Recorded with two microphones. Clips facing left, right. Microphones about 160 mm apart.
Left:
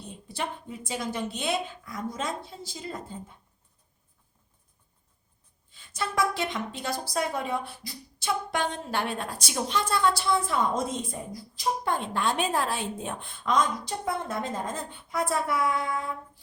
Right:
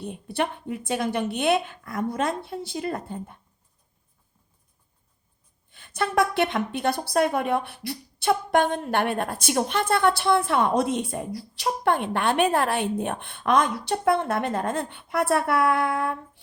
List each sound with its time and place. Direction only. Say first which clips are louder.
0.0 s a woman's voice: right 7 dB; 60° right (ahead or behind)
5.7 s a woman's voice: right 6 dB; 60° right (ahead or behind)